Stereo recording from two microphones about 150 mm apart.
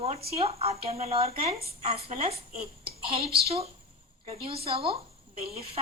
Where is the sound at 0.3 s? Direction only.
40° right (ahead or behind).